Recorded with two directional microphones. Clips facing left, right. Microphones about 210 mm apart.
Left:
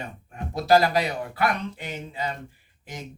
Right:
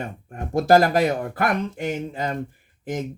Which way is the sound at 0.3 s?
50° right (ahead or behind).